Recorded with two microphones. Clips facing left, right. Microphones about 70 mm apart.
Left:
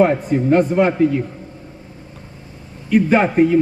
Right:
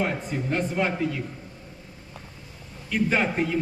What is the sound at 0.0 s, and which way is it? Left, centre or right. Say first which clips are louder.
Speech: left 13 dB; left.